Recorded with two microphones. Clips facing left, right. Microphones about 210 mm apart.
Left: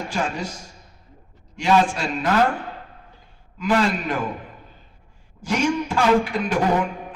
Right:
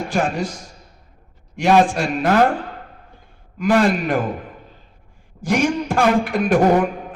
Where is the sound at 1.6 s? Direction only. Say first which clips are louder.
Right 4 dB; 50° right (ahead or behind).